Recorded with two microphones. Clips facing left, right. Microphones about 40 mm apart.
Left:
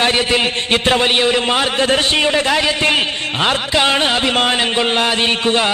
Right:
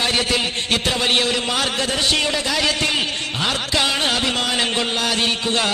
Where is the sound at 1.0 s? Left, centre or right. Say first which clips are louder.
Left 5 dB; left.